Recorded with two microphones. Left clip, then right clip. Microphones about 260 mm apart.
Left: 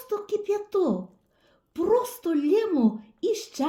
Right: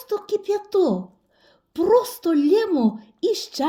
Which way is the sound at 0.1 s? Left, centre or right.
Right.